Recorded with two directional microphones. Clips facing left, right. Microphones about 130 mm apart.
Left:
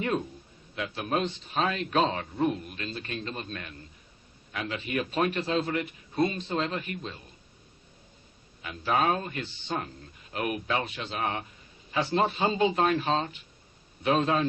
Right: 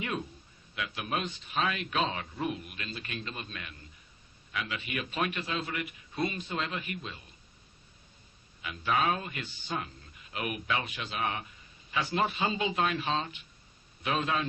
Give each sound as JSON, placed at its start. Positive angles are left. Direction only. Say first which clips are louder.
{"t": 0.8, "sound": "a man's voice", "louder": "left 5 dB", "side_deg": 35}
{"t": 8.6, "sound": "a man's voice", "louder": "left 3 dB", "side_deg": 40}